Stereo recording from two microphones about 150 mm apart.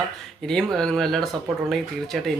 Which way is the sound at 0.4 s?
5° left (ahead or behind).